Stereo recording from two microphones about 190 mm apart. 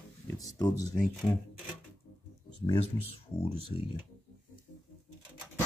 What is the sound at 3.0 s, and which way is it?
Speech, 30° left (ahead or behind).